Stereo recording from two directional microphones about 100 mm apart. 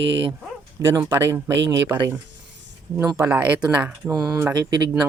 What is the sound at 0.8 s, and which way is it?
Speech, 25° right (ahead or behind).